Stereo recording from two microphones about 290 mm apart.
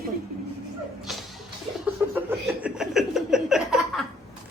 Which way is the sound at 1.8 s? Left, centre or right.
Centre.